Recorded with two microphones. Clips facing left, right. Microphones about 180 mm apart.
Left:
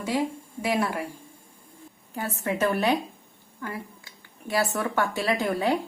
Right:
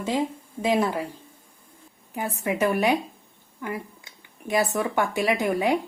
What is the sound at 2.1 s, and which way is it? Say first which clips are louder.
A woman's voice: right 2 dB; 15° right (ahead or behind).